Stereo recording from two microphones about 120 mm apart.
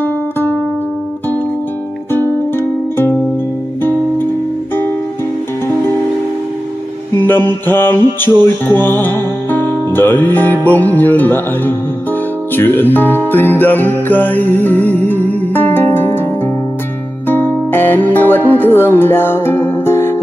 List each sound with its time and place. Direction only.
0.0 s music: 15° left (ahead or behind)
7.2 s music: 15° left (ahead or behind)
17.3 s music: 15° left (ahead or behind)